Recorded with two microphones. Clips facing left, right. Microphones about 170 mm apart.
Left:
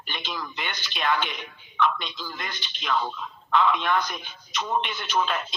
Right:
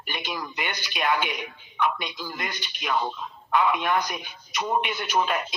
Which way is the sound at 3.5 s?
10° right (ahead or behind).